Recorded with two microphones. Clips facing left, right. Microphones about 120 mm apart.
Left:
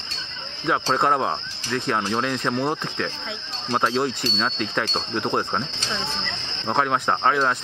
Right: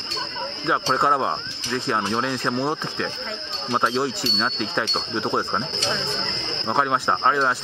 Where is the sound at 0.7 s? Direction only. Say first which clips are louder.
Even; centre (ahead or behind).